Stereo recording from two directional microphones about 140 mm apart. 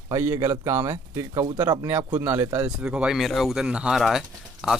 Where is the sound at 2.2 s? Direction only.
15° right (ahead or behind).